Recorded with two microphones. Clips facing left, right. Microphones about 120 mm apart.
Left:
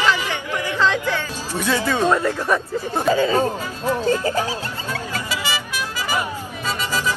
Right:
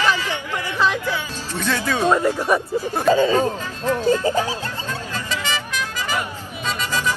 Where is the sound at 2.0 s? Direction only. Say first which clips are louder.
Right 1 dB; 15° right (ahead or behind).